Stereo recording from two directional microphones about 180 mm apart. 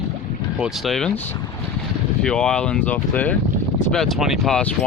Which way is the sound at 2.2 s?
5° left (ahead or behind).